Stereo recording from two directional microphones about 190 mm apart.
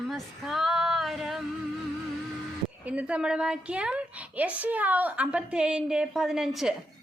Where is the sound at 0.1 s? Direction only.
Centre (ahead or behind).